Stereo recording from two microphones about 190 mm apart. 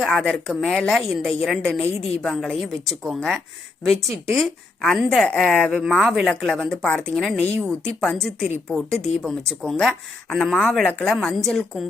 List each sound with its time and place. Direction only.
0.0 s speech: centre (ahead or behind)
1.9 s a woman's voice: 35° left (ahead or behind)
2.2 s speech: centre (ahead or behind)